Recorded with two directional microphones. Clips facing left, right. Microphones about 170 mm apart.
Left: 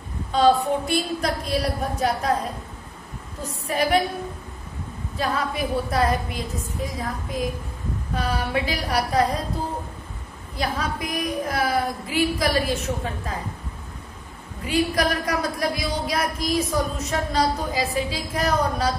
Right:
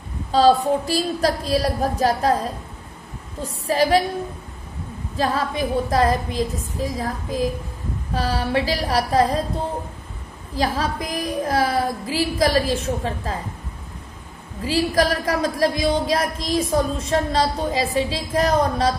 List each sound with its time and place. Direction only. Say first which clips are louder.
0.3 s a woman's voice: right 3 dB; 35° right (ahead or behind)
3.6 s a woman's voice: right 4 dB; 30° right (ahead or behind)
5.1 s a woman's voice: right 3 dB; 30° right (ahead or behind)
10.5 s a woman's voice: right 4 dB; 30° right (ahead or behind)
14.6 s a woman's voice: right 3 dB; 30° right (ahead or behind)